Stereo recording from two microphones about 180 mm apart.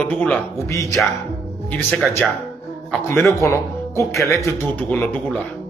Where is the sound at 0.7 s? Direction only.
15° left (ahead or behind).